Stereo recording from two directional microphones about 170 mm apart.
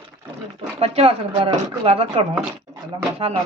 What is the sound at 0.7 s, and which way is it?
Speech, 35° right (ahead or behind).